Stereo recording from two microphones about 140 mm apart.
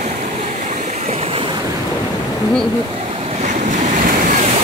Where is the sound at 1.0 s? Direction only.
45° right (ahead or behind).